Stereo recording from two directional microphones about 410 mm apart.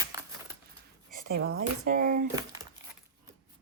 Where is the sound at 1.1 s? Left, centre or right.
Right.